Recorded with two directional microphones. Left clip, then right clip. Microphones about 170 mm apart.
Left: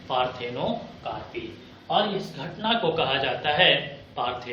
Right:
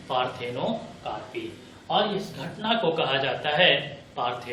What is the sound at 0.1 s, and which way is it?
A man's voice, 20° left (ahead or behind).